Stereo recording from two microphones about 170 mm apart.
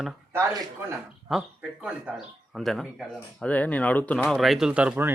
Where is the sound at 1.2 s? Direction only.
5° right (ahead or behind).